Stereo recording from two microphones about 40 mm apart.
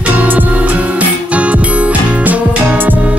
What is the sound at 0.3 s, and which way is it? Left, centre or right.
Music, right.